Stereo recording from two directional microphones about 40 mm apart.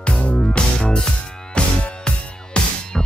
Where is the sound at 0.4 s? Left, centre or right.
Left.